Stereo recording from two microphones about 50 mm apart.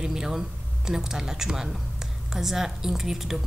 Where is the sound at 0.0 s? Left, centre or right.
Centre.